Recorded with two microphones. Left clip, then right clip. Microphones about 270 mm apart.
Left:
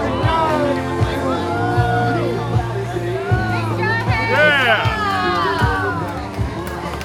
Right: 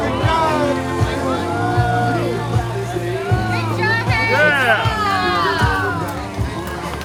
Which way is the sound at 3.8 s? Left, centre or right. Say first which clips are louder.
Right 2 dB; centre.